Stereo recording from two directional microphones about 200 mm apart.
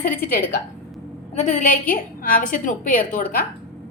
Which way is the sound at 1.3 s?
35° left (ahead or behind).